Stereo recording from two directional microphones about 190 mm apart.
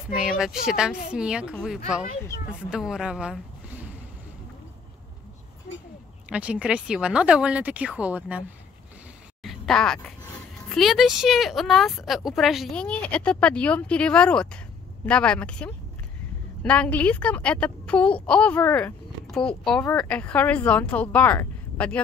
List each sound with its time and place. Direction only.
0.2 s a woman's voice: centre (ahead or behind)
5.7 s a sound: 50° left (ahead or behind)
6.2 s speech: 5° right (ahead or behind)